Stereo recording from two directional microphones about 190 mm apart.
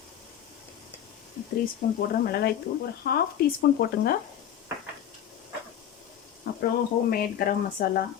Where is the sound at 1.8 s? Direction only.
45° left (ahead or behind).